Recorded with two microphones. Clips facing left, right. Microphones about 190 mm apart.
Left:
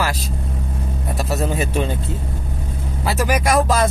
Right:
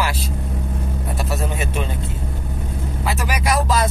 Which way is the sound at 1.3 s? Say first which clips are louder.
Left 5 dB; 40° left (ahead or behind).